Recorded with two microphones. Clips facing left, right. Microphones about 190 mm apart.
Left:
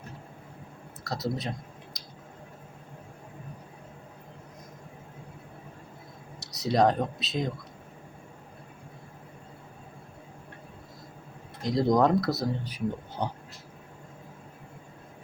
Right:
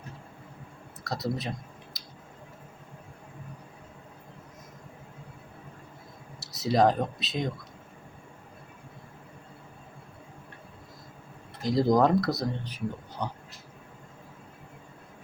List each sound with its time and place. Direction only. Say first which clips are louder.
1.0 s a sound: even; centre (ahead or behind)
6.4 s speech: even; centre (ahead or behind)
11.6 s speech: right 1 dB; centre (ahead or behind)
13.2 s speech: left 2 dB; 30° left (ahead or behind)